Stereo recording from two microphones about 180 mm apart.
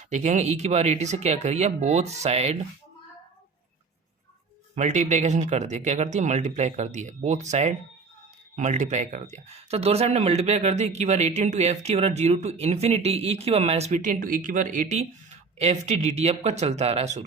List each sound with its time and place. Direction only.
0.1 s speech: 40° right (ahead or behind)
4.7 s speech: 40° right (ahead or behind)